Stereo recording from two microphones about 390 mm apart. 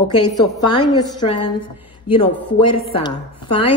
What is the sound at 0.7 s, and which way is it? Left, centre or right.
Speech, centre.